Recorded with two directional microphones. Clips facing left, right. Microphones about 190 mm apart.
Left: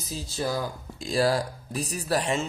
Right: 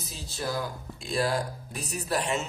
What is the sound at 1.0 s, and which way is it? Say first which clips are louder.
Speech: left 4 dB; 35° left (ahead or behind).